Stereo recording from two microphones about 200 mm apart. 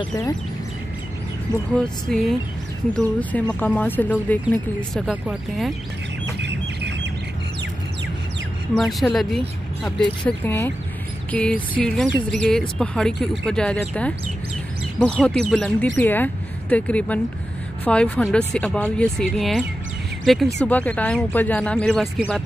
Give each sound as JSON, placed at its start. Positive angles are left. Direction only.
{"t": 0.0, "sound": "speech", "side_deg": 15}
{"t": 2.0, "sound": "speech", "side_deg": 0}
{"t": 6.4, "sound": "squawk", "side_deg": -60}
{"t": 8.7, "sound": "speech", "side_deg": 0}
{"t": 15.2, "sound": "speech", "side_deg": 5}